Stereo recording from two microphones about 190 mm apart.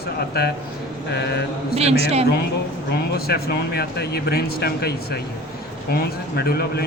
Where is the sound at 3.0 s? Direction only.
55° left (ahead or behind).